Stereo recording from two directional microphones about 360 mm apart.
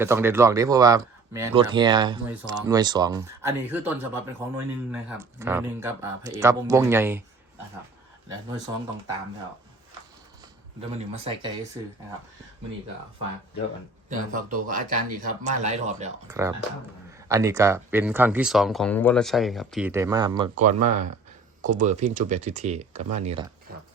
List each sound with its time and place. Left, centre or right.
0.0 s speech: centre
8.7 s speech: centre
10.8 s speech: centre
14.1 s speech: right
16.3 s speech: centre